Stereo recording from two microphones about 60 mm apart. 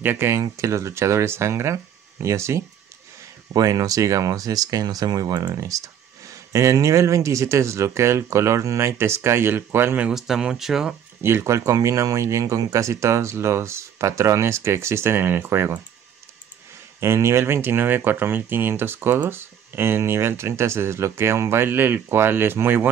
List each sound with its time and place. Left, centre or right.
0.0 s speech: right
0.4 s speech: right
3.5 s speech: right
10.1 s speech: centre
11.2 s speech: right
17.0 s speech: right